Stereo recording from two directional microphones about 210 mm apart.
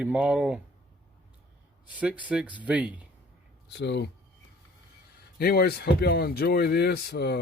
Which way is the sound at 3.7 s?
55° left (ahead or behind).